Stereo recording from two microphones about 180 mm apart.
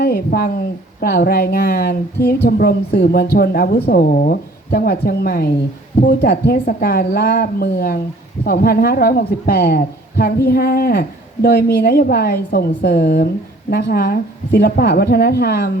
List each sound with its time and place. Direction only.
0.0 s speech: 55° left (ahead or behind)
4.1 s speech: 50° left (ahead or behind)